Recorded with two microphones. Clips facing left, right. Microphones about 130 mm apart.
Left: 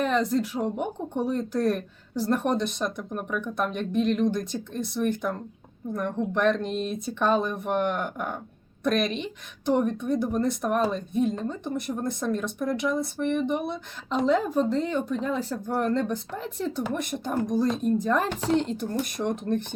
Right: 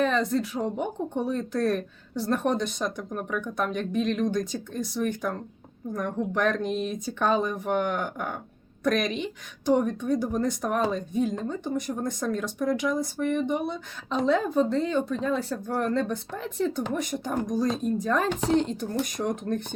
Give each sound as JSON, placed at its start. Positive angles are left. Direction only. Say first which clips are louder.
{"t": 0.0, "sound": "speech", "louder": "even", "side_deg": 5}